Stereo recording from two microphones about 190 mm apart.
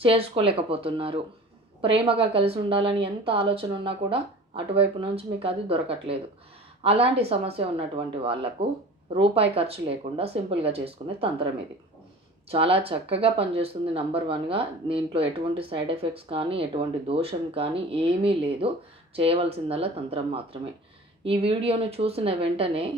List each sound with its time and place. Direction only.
0.0 s speech: 30° right (ahead or behind)
12.5 s speech: 30° right (ahead or behind)